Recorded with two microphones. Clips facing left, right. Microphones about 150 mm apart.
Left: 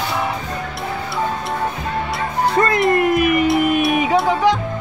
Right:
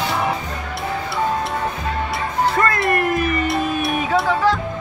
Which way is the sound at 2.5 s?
20° left (ahead or behind).